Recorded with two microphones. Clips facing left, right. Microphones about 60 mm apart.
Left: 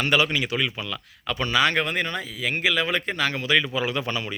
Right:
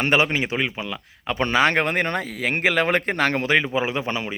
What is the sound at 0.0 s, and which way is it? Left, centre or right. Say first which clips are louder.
Speech: right 2 dB; right.